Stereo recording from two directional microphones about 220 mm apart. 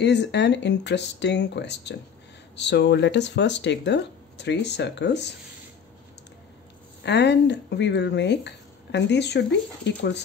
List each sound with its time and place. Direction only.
0.0 s speech: 50° left (ahead or behind)
7.0 s speech: 50° left (ahead or behind)